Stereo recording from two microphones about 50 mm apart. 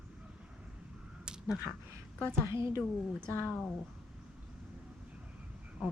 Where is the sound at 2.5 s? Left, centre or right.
Right.